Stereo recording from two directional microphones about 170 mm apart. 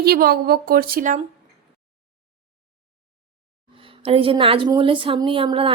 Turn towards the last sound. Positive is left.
turn(degrees=-30)  # may be behind; listen again after turning